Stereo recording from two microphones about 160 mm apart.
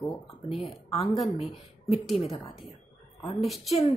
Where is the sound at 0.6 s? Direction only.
40° left (ahead or behind).